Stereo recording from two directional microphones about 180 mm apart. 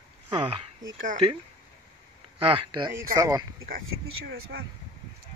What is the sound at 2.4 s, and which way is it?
Speech, 30° right (ahead or behind).